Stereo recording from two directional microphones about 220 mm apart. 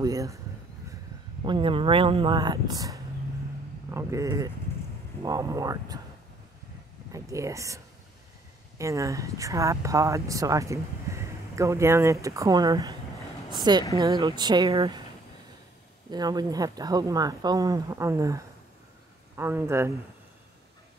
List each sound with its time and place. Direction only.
0.0 s a sound: 15° right (ahead or behind)
1.4 s speech: 20° right (ahead or behind)
7.1 s speech: 15° right (ahead or behind)
16.1 s speech: 20° right (ahead or behind)